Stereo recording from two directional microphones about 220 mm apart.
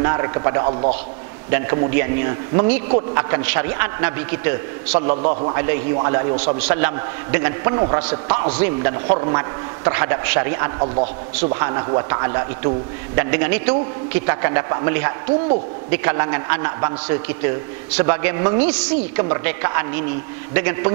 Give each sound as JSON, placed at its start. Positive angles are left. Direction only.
{"t": 0.0, "sound": "a man's voice", "side_deg": -15}
{"t": 5.2, "sound": "a man's voice", "side_deg": -30}
{"t": 5.5, "sound": "a man's voice", "side_deg": -15}